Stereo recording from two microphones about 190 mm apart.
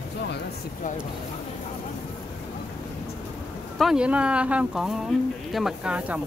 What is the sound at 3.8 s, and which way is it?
Speech, 5° right (ahead or behind).